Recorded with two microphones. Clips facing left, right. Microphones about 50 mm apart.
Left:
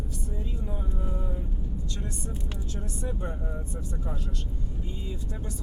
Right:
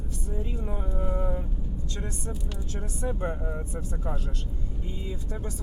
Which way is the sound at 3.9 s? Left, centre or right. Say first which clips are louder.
Right 2 dB; right.